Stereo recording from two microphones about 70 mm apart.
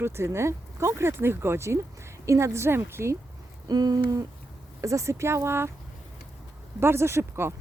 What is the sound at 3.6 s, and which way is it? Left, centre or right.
Owl, right.